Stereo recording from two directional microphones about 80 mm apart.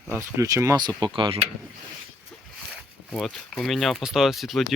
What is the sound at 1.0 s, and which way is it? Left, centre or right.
Speech, right.